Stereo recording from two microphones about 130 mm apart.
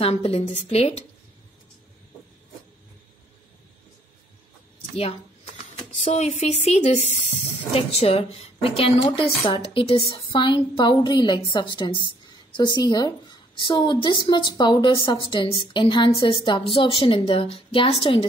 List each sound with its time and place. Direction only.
0.0 s a woman's voice: 50° left (ahead or behind)
4.9 s speech: 55° left (ahead or behind)
7.7 s a woman's voice: 50° left (ahead or behind)
9.9 s a woman's voice: 25° left (ahead or behind)
10.2 s a woman's voice: 40° left (ahead or behind)